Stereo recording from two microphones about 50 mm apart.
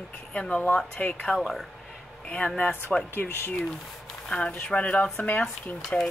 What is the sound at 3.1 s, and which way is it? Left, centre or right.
Speech, left.